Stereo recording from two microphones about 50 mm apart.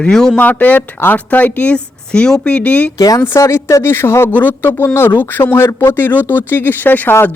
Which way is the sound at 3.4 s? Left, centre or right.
Left.